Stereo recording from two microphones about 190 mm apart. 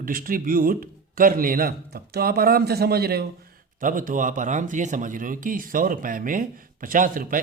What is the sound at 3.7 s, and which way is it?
A man's voice, 45° right (ahead or behind).